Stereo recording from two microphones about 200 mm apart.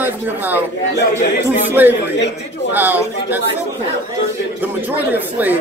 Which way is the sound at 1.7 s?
10° right (ahead or behind).